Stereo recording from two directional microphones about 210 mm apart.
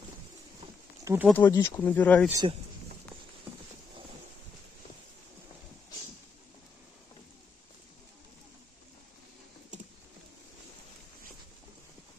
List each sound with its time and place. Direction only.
1.0 s speech: 10° right (ahead or behind)
1.3 s speech: 10° left (ahead or behind)
2.4 s speech: 25° right (ahead or behind)